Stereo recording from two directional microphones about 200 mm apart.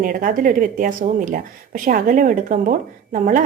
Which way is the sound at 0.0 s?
40° right (ahead or behind).